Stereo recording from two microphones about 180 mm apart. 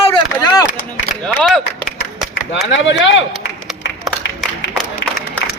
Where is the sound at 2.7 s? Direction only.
90° left.